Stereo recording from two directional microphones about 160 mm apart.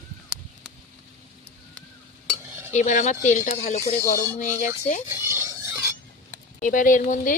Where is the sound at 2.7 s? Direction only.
50° left (ahead or behind).